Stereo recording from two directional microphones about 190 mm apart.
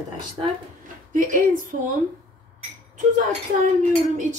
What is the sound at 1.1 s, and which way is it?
Speech, 45° right (ahead or behind).